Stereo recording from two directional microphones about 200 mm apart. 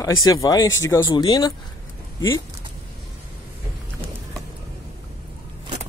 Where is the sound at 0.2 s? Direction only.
20° left (ahead or behind).